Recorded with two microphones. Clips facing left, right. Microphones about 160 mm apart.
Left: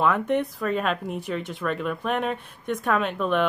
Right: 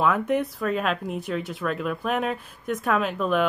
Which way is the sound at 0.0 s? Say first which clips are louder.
Even; centre (ahead or behind).